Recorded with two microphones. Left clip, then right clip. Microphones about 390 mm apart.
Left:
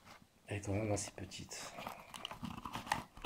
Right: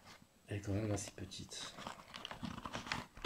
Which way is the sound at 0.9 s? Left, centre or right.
Centre.